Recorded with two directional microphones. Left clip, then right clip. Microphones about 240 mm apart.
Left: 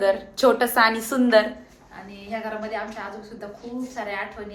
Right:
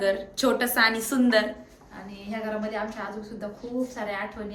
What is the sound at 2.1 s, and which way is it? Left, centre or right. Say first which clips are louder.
A woman's voice: left 2 dB; centre.